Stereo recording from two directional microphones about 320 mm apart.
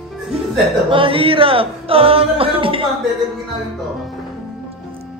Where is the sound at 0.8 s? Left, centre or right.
Centre.